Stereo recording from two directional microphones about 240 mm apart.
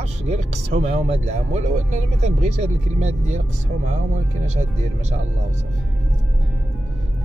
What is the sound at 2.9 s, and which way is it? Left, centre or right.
Speech, right.